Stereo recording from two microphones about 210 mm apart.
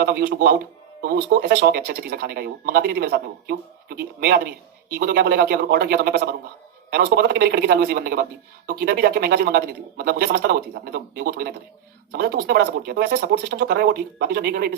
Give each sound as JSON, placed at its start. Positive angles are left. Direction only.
{"t": 0.0, "sound": "speech", "side_deg": -50}